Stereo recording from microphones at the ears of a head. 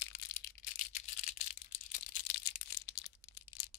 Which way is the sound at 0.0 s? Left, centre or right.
Left.